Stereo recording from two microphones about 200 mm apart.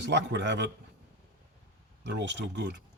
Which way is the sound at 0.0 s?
60° right (ahead or behind).